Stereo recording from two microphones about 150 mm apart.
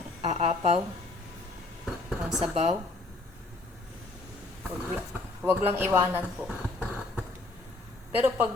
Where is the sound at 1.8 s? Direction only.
Centre (ahead or behind).